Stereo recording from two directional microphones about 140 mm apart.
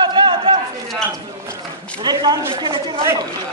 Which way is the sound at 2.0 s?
30° right (ahead or behind).